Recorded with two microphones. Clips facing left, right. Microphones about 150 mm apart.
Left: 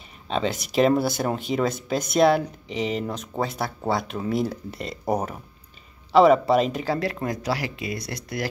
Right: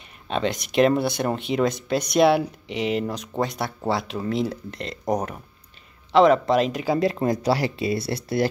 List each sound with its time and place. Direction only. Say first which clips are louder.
0.3 s speech: right 1 dB; centre (ahead or behind)
6.9 s speech: right 4 dB; 25° right (ahead or behind)